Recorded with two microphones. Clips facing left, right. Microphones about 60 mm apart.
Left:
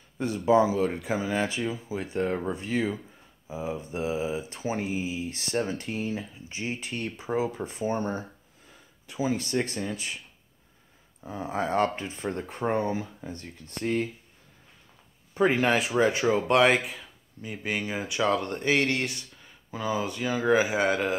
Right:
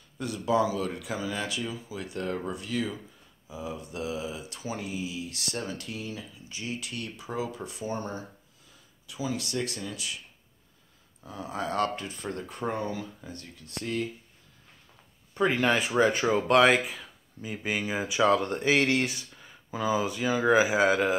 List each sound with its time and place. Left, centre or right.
0.2 s speech: left
3.4 s mantra: left
11.2 s speech: left
15.3 s speech: centre